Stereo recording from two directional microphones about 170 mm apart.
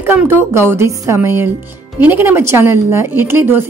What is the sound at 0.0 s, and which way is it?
Speech, 10° right (ahead or behind).